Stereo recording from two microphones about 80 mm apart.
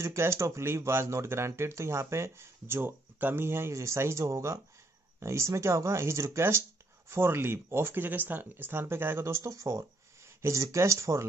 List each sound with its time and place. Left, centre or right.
0.0 s speech: right